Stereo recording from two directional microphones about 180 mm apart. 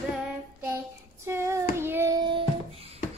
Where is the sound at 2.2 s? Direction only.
25° right (ahead or behind).